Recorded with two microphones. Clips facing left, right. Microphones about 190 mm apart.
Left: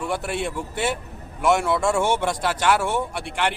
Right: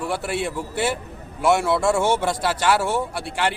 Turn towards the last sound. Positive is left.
turn(degrees=-5)  # may be behind; listen again after turning